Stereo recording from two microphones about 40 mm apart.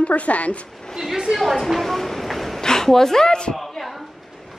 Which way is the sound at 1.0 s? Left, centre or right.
Centre.